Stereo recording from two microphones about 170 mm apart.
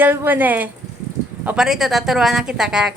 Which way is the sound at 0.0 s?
10° right (ahead or behind).